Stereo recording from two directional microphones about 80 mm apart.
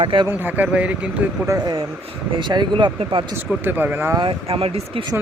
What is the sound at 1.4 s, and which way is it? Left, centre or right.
Speech, right.